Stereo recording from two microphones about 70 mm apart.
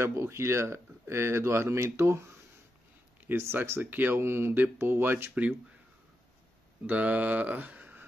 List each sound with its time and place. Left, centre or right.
0.0 s speech: right
3.2 s speech: right
6.9 s speech: right